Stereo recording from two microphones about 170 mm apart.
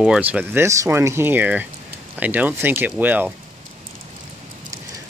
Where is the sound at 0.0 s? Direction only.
5° right (ahead or behind).